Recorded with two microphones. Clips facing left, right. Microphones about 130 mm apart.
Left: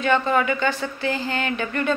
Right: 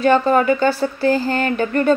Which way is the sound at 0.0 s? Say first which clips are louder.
Right 6 dB; 40° right (ahead or behind).